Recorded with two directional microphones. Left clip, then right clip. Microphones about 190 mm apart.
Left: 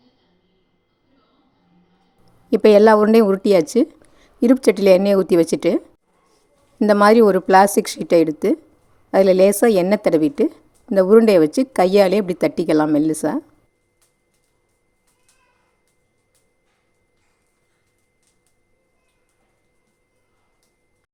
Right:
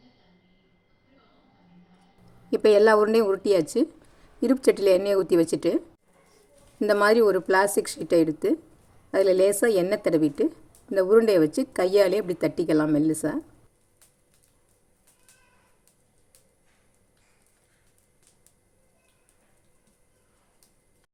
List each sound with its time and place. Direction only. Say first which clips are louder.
2.5 s a woman's voice: left 7 dB; 45° left (ahead or behind)